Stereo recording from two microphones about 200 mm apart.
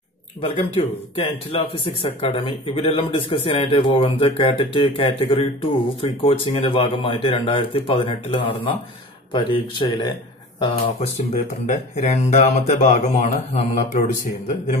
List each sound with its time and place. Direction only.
0.4 s a man's voice: 25° left (ahead or behind)
10.6 s speech: 35° left (ahead or behind)